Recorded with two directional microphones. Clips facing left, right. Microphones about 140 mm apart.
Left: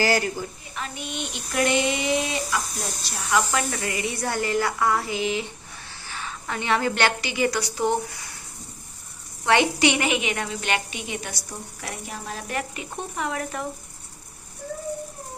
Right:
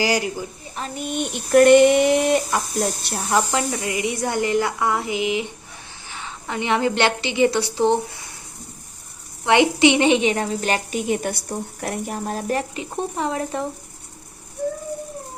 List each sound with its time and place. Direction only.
0.0 s speech: 15° right (ahead or behind)
0.8 s a sound: 45° right (ahead or behind)
3.2 s a woman's voice: 40° right (ahead or behind)
3.4 s a woman's voice: 20° right (ahead or behind)
9.4 s a woman's voice: 20° right (ahead or behind); by 12.6 s 40° right (ahead or behind)
12.7 s speech: 30° right (ahead or behind)